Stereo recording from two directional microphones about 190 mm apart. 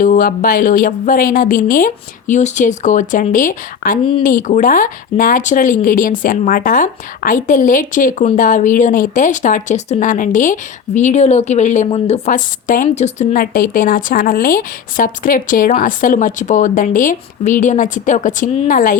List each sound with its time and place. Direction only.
0.0 s speech: 45° left (ahead or behind)